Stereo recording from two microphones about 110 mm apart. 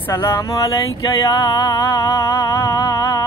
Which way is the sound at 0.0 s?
25° left (ahead or behind).